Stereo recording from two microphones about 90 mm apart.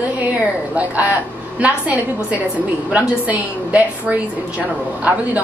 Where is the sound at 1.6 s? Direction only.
15° right (ahead or behind).